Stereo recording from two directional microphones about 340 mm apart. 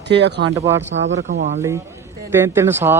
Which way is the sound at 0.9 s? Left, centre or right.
Right.